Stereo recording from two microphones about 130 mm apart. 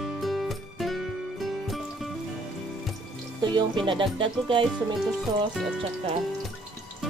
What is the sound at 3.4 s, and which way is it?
Speech, 35° right (ahead or behind).